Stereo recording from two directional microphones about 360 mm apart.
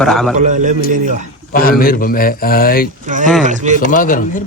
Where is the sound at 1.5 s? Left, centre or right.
Left.